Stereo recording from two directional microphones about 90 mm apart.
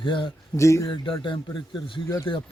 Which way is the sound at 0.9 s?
65° left (ahead or behind).